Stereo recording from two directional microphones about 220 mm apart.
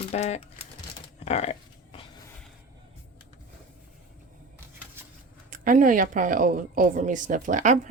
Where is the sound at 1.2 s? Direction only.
30° left (ahead or behind).